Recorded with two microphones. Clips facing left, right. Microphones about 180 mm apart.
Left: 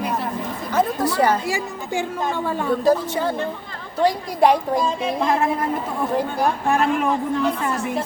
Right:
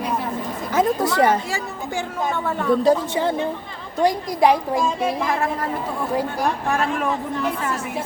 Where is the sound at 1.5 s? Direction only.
15° left (ahead or behind).